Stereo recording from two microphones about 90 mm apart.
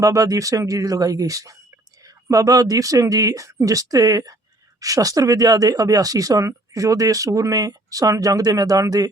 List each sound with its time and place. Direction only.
0.0 s speech: 40° right (ahead or behind)